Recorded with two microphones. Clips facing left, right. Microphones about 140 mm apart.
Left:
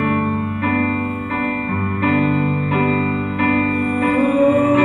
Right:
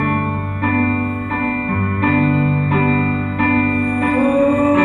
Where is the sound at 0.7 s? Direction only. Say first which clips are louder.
Right 4 dB; 40° right (ahead or behind).